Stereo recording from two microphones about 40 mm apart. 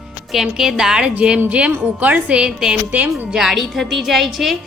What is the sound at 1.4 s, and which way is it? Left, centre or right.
Speech, right.